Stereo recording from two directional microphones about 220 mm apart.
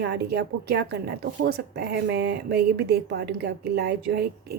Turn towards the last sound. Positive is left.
turn(degrees=-45)  # may be behind; listen again after turning